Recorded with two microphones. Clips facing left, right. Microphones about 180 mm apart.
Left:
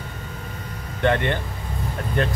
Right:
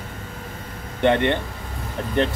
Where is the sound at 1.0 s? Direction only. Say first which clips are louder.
Right 3 dB; 20° right (ahead or behind).